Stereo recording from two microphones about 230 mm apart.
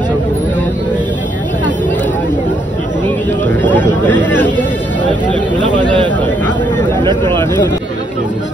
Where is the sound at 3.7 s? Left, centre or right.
Centre.